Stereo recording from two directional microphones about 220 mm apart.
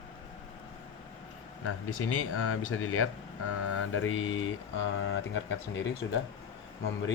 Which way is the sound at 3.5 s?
70° left (ahead or behind).